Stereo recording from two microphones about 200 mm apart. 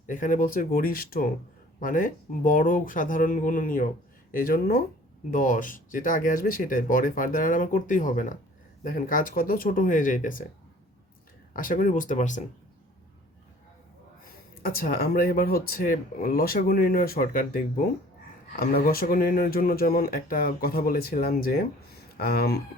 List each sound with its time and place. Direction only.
0.1 s speech: 40° left (ahead or behind)
11.5 s speech: 45° left (ahead or behind)
14.6 s speech: 45° left (ahead or behind)